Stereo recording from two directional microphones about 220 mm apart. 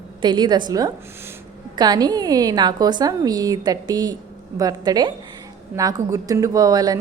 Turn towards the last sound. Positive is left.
turn(degrees=-15)  # may be behind; listen again after turning